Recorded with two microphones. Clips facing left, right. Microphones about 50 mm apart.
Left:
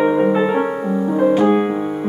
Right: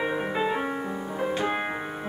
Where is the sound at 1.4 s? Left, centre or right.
Centre.